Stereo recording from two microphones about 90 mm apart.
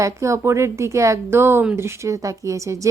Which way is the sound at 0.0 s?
35° right (ahead or behind).